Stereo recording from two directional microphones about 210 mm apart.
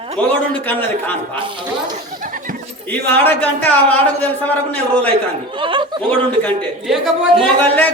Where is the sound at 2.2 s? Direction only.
40° right (ahead or behind).